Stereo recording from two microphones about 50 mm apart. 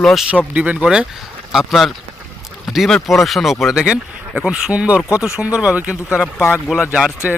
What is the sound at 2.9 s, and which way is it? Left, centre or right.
Speech, centre.